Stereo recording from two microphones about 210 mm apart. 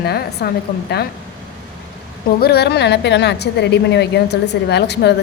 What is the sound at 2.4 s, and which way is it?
A woman's voice, 50° left (ahead or behind).